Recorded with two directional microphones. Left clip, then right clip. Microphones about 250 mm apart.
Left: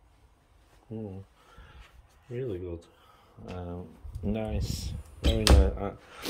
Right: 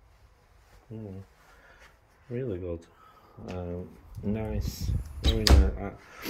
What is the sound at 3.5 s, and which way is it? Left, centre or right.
Speech, centre.